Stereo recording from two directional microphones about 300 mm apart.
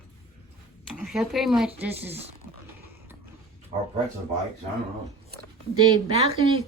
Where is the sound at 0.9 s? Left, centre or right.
Centre.